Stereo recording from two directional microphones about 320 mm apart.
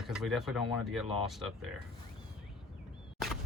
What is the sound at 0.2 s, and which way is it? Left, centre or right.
Speech, centre.